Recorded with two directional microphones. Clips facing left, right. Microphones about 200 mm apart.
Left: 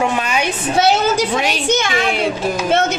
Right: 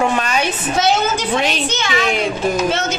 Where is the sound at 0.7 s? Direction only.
35° left (ahead or behind).